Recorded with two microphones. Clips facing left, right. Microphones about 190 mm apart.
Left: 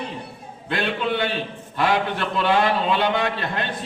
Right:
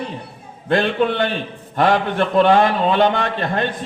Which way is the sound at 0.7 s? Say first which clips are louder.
Right 7 dB; 50° right (ahead or behind).